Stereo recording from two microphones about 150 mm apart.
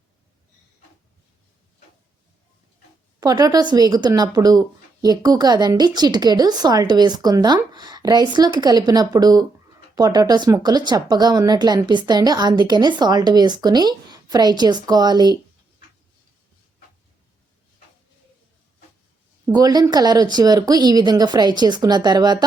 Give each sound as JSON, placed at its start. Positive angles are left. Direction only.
{"t": 3.2, "sound": "speech", "side_deg": -25}
{"t": 19.5, "sound": "speech", "side_deg": -25}